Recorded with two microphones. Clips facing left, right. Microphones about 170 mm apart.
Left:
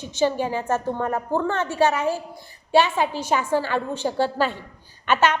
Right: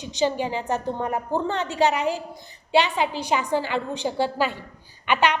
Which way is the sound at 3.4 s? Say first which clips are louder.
Left 2 dB; 15° right (ahead or behind).